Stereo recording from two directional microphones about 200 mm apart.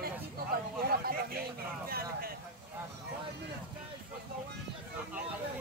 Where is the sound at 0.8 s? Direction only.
50° right (ahead or behind).